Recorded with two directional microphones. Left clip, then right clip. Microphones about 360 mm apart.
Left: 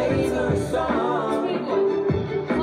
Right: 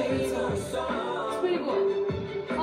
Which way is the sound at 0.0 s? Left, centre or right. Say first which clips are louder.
Left 5 dB; left.